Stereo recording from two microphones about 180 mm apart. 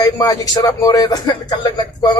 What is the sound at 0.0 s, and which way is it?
Speech, 20° left (ahead or behind).